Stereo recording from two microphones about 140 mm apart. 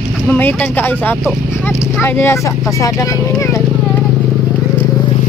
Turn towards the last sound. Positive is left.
turn(degrees=25)  # may be behind; listen again after turning